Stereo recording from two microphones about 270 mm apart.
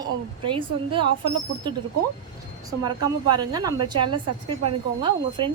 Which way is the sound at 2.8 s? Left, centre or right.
Centre.